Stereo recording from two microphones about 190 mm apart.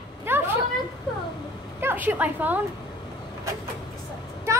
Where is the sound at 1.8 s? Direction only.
10° right (ahead or behind).